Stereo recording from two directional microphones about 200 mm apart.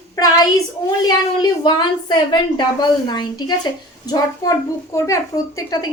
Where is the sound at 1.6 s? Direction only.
20° left (ahead or behind).